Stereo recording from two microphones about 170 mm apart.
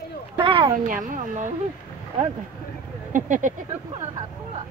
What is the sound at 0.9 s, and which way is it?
Speech, 50° right (ahead or behind).